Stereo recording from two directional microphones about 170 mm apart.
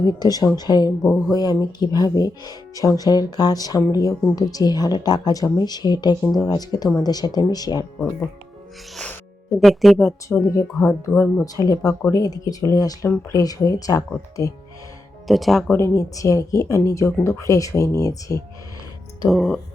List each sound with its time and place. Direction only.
0.0 s speech: 20° left (ahead or behind)
9.6 s speech: centre (ahead or behind)
10.2 s speech: 20° left (ahead or behind)
11.1 s speech: 5° left (ahead or behind)
11.4 s speech: 20° left (ahead or behind)
15.3 s speech: centre (ahead or behind)
15.7 s speech: 20° left (ahead or behind)
19.3 s speech: centre (ahead or behind)